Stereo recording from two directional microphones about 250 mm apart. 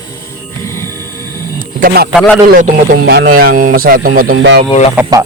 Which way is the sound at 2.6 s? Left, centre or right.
Right.